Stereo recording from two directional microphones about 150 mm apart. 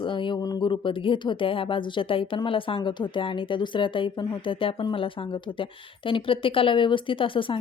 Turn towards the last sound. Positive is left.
turn(degrees=35)  # may be behind; listen again after turning